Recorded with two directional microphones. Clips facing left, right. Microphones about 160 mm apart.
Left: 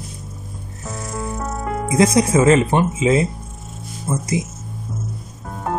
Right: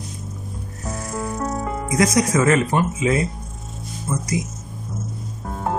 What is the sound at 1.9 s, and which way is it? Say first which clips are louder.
Speech: left 3 dB; 25° left (ahead or behind).